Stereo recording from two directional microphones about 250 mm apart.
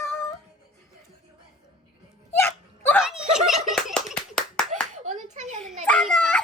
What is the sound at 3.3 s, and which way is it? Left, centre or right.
Clapping, centre.